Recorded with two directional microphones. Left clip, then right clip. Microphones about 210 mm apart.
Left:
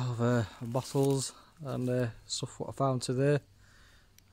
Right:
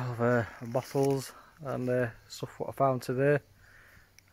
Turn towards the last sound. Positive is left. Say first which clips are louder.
# right 2 dB
turn(degrees=10)  # may be behind; listen again after turning